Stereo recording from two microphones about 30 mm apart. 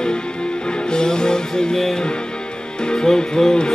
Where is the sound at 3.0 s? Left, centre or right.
Centre.